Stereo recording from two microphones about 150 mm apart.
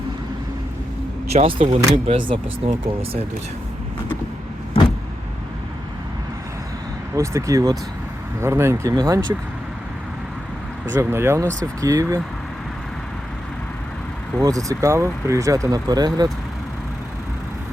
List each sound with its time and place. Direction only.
1.3 s speech: 45° right (ahead or behind)
7.2 s speech: 20° right (ahead or behind)
10.9 s speech: 15° right (ahead or behind)
14.4 s speech: 20° right (ahead or behind)